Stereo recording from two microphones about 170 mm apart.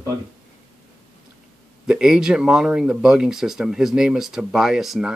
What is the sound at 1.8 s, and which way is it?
Speech, 5° right (ahead or behind).